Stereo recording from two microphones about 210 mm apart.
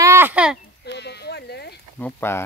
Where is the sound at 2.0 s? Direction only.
10° left (ahead or behind).